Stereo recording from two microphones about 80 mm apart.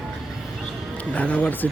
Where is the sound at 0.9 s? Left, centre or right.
Centre.